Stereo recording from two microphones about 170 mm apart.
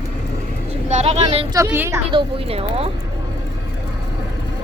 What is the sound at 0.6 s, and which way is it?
Speech, 40° right (ahead or behind).